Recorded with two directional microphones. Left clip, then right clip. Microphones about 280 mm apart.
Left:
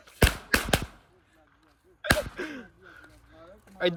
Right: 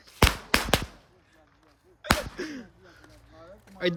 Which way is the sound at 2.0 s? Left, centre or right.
Centre.